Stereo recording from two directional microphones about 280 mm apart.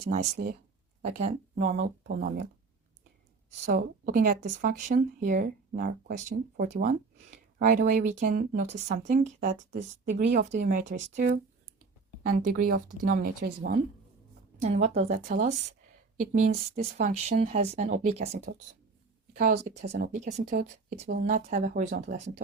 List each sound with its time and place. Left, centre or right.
0.1 s speech: right
3.7 s speech: right